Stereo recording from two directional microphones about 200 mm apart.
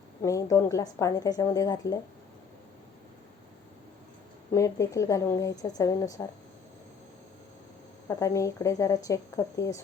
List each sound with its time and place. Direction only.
0.2 s a woman's voice: 15° left (ahead or behind)
4.5 s a woman's voice: 15° left (ahead or behind)
8.0 s a woman's voice: 15° left (ahead or behind)